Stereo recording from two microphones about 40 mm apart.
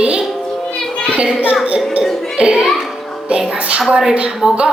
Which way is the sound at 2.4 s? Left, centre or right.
Right.